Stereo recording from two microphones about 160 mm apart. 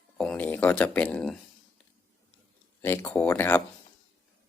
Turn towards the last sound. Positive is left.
turn(degrees=15)  # may be behind; listen again after turning